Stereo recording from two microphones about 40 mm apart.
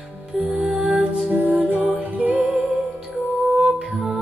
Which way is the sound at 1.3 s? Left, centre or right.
Right.